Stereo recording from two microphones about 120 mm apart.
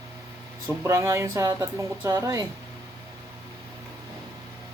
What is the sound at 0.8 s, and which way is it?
Speech, 25° right (ahead or behind).